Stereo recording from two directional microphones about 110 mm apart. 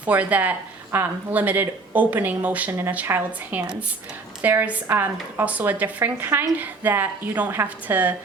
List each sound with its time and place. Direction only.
0.0 s speech: 15° right (ahead or behind)